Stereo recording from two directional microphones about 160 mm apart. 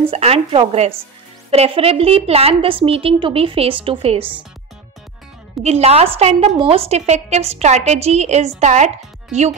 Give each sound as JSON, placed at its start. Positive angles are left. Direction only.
{"t": 0.1, "sound": "a woman's voice", "side_deg": -40}
{"t": 4.2, "sound": "speech", "side_deg": -10}
{"t": 5.6, "sound": "a woman's voice", "side_deg": -40}